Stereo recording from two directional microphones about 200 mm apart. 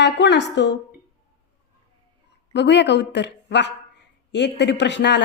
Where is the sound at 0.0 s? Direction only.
60° left (ahead or behind).